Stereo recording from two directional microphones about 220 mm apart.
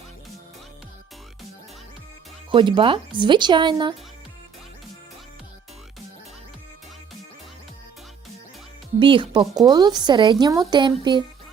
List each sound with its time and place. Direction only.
2.5 s speech: 20° right (ahead or behind)
9.0 s speech: 25° right (ahead or behind)